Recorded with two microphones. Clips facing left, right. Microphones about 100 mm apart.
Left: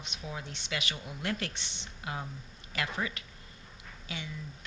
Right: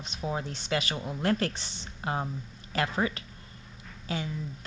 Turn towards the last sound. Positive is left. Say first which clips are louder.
# right 8 dB
turn(degrees=-40)  # may be behind; listen again after turning